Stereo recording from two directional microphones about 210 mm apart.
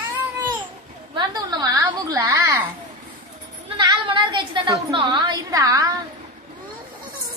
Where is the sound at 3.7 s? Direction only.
20° right (ahead or behind).